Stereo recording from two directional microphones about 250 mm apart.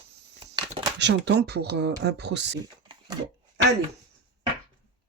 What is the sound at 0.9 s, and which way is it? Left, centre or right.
Speech, right.